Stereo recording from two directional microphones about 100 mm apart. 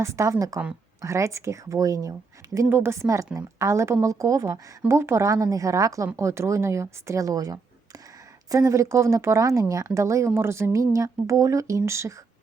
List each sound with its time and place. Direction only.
0.0 s speech: 30° right (ahead or behind)
2.6 s a woman's voice: 25° right (ahead or behind)